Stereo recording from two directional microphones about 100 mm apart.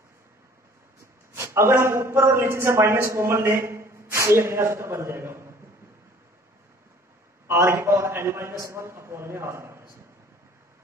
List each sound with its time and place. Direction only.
1.3 s a man's voice: 25° right (ahead or behind)
7.4 s a man's voice: 30° right (ahead or behind)